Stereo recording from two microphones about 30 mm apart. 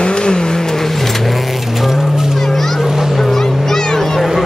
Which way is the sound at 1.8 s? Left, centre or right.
Centre.